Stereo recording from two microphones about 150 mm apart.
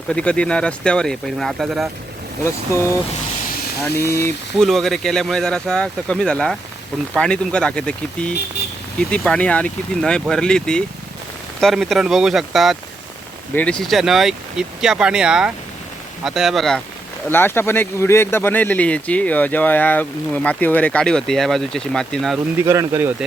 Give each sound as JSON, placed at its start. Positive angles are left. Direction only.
{"t": 0.1, "sound": "speech", "side_deg": 5}
{"t": 2.4, "sound": "speech", "side_deg": 20}
{"t": 4.6, "sound": "speech", "side_deg": 0}
{"t": 13.5, "sound": "speech", "side_deg": 10}
{"t": 17.2, "sound": "speech", "side_deg": 15}
{"t": 22.6, "sound": "speech", "side_deg": -20}